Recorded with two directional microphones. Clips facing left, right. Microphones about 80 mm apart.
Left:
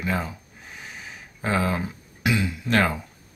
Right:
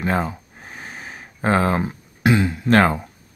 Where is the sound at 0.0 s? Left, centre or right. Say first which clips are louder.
Right 6 dB; right.